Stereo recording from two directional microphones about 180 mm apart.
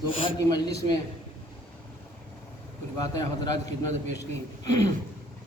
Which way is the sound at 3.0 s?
20° left (ahead or behind).